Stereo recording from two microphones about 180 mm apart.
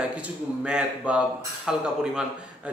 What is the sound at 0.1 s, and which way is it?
Speech, 5° right (ahead or behind).